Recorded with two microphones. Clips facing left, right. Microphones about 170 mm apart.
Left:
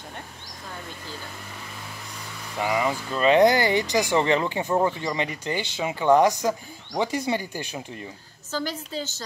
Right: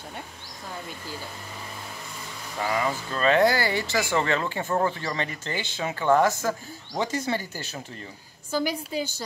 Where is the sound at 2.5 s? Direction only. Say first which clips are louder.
Left 2 dB; 15° left (ahead or behind).